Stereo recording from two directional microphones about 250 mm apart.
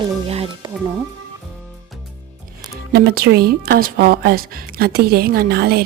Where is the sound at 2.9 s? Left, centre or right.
Right.